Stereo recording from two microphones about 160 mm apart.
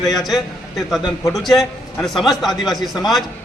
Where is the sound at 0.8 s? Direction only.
Centre (ahead or behind).